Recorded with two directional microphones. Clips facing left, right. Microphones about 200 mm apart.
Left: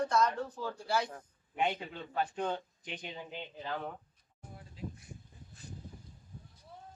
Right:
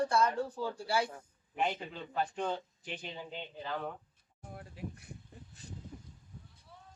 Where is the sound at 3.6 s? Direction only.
5° left (ahead or behind).